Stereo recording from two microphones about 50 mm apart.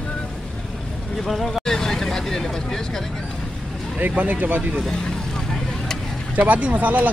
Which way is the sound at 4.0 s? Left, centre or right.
Right.